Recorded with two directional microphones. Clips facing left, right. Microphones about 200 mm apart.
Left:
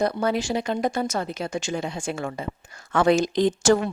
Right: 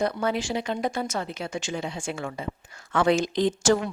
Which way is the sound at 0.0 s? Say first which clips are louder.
Left 3 dB; 40° left (ahead or behind).